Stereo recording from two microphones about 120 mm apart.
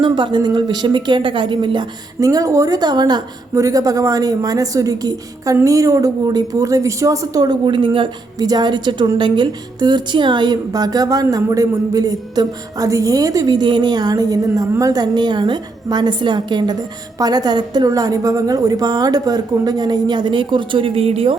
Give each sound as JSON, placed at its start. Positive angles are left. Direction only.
{"t": 0.0, "sound": "a woman's voice", "side_deg": -40}
{"t": 2.2, "sound": "a woman's voice", "side_deg": -30}